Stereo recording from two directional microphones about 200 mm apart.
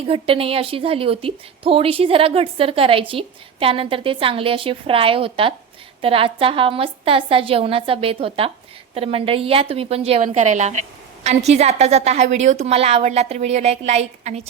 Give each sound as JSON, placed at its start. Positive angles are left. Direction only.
{"t": 0.1, "sound": "a woman's voice", "side_deg": -30}